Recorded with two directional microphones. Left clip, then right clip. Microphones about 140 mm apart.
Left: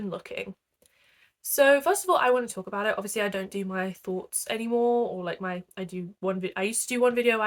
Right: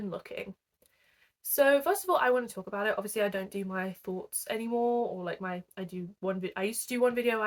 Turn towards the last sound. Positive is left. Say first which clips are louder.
# left 5 dB
turn(degrees=30)  # may be behind; listen again after turning